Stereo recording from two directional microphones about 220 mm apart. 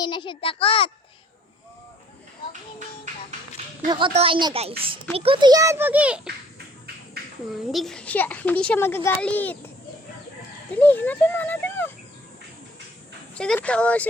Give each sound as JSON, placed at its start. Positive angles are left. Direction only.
{"t": 0.0, "sound": "a child's voice", "side_deg": 20}
{"t": 3.8, "sound": "a child's voice", "side_deg": -25}
{"t": 7.7, "sound": "a woman's voice", "side_deg": 0}
{"t": 10.7, "sound": "speech", "side_deg": 10}
{"t": 13.3, "sound": "speech", "side_deg": 5}